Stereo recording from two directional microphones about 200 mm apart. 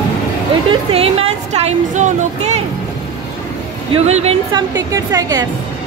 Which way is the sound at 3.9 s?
30° right (ahead or behind).